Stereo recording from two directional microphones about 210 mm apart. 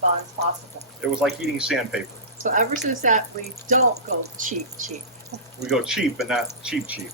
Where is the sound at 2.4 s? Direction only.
35° right (ahead or behind).